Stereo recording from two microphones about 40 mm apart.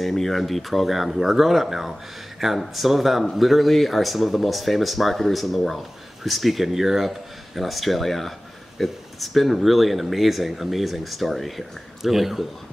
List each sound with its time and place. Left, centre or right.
0.0 s speech: centre